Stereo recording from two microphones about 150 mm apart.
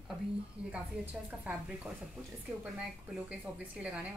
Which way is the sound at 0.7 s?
10° right (ahead or behind).